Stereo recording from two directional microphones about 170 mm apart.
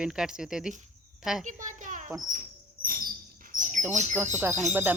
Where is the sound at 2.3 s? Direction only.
55° right (ahead or behind).